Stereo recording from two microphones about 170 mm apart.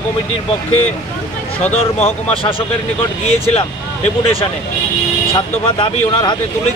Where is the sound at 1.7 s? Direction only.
35° left (ahead or behind).